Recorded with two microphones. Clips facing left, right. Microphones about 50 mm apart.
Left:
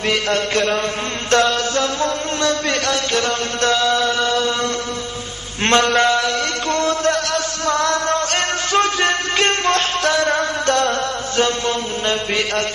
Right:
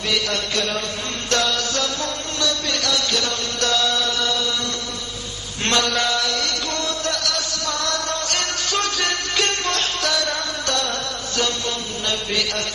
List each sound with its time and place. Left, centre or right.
0.1 s chant: left
5.7 s chant: left